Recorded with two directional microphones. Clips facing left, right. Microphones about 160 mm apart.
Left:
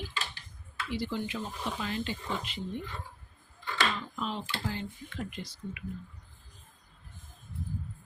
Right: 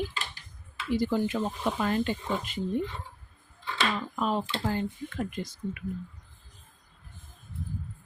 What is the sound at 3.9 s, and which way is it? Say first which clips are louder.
Speech: right 7 dB; 45° right (ahead or behind).